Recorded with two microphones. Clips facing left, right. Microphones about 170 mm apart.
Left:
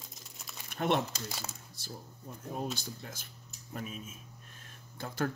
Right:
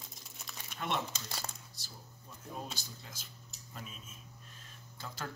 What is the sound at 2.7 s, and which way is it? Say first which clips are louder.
Speech: left 6 dB; 55° left (ahead or behind).